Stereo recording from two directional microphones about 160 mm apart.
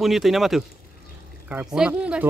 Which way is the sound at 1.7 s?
5° right (ahead or behind).